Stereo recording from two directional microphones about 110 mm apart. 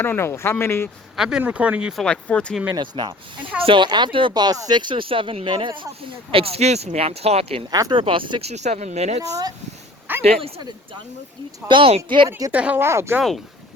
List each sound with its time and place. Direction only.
0.0 s speech: 20° left (ahead or behind)
1.1 s speech: 5° right (ahead or behind)
2.0 s speech: 10° left (ahead or behind)
2.7 s speech: 45° right (ahead or behind)
6.3 s speech: 60° right (ahead or behind)
7.7 s speech: 35° right (ahead or behind)
7.9 s speech: 50° right (ahead or behind)
8.4 s speech: 80° right
10.1 s a sound: 15° right (ahead or behind)
11.7 s speech: 55° right (ahead or behind)
12.5 s speech: 15° right (ahead or behind)